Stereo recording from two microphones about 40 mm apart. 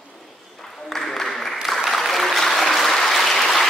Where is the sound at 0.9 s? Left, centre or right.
Centre.